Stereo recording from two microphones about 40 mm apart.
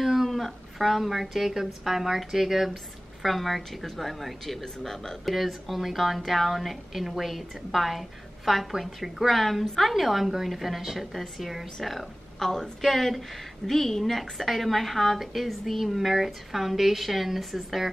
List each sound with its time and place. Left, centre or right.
0.0 s a woman's voice: centre